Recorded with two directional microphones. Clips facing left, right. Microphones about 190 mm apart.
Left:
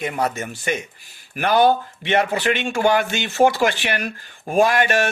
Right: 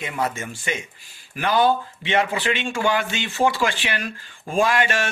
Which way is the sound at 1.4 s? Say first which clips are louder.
Left 3 dB; 60° left (ahead or behind).